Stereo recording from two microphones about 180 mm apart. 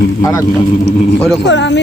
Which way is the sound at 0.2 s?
20° left (ahead or behind).